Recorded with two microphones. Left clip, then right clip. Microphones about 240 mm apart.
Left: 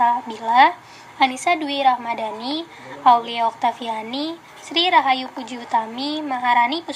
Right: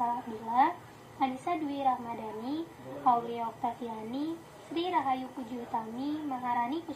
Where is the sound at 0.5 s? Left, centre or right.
Left.